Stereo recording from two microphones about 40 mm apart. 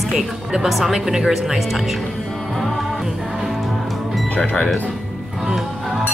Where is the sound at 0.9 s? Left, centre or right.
Centre.